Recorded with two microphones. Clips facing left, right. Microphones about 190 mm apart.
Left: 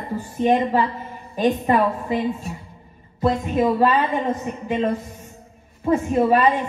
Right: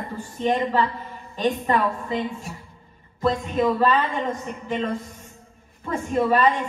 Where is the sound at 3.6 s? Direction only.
15° left (ahead or behind).